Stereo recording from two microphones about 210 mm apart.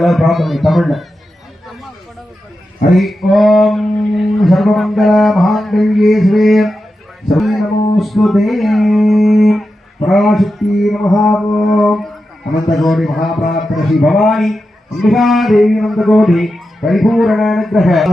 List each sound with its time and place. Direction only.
0.0 s speech: centre (ahead or behind)
2.9 s speech: centre (ahead or behind)
13.4 s speech: 40° left (ahead or behind)
13.7 s speech: centre (ahead or behind)